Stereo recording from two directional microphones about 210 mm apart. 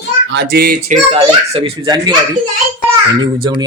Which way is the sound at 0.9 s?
30° right (ahead or behind).